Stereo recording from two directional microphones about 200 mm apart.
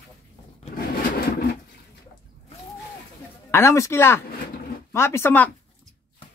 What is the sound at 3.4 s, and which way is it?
Speech, 10° left (ahead or behind).